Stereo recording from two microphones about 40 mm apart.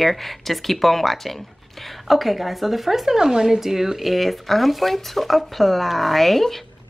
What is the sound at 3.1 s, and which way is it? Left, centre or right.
Speech, centre.